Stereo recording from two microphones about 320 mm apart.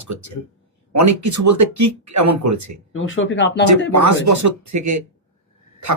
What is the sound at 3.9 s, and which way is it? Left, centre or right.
Speech, right.